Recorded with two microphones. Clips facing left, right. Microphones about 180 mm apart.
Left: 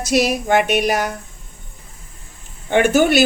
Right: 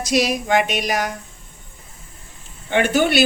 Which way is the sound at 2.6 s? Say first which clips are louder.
Left 4 dB; 50° left (ahead or behind).